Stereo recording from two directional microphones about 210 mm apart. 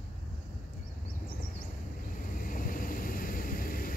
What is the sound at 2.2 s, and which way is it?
Vehicle, 40° left (ahead or behind).